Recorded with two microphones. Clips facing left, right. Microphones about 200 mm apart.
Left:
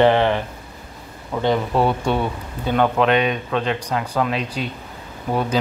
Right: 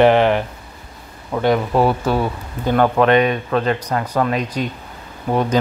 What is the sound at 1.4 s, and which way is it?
Speech, 10° right (ahead or behind).